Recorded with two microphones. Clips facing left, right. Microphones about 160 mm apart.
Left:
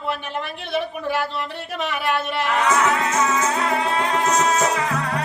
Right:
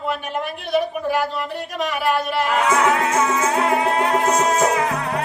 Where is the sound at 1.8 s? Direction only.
40° right (ahead or behind).